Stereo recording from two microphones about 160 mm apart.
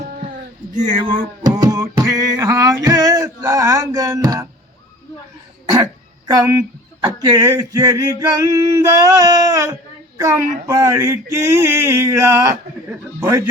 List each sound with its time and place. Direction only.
1.4 s a sound: 25° right (ahead or behind)
2.8 s music: 20° right (ahead or behind)
5.7 s speech: 25° right (ahead or behind)
8.2 s male singing: 20° right (ahead or behind)
10.2 s speech: 20° right (ahead or behind)
10.7 s a sound: 15° right (ahead or behind)